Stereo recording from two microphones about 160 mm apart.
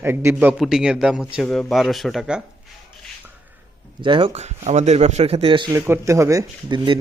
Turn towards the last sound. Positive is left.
turn(degrees=-30)  # may be behind; listen again after turning